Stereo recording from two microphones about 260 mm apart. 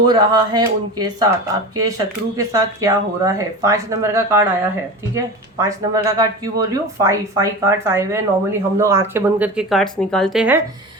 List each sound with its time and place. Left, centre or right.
0.0 s speech: centre